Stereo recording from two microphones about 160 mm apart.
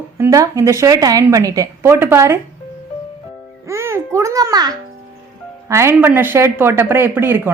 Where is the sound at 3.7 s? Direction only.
15° right (ahead or behind).